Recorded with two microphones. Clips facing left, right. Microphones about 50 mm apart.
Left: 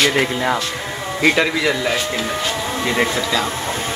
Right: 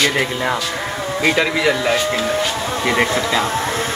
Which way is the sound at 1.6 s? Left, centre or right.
Right.